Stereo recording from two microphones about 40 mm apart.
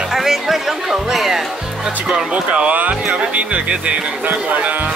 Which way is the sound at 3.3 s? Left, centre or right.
Right.